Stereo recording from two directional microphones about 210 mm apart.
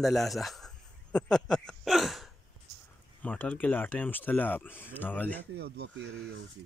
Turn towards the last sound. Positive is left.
turn(degrees=-50)  # may be behind; listen again after turning